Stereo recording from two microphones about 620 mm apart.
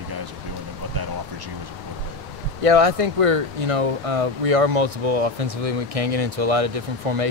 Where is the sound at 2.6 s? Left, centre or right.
Right.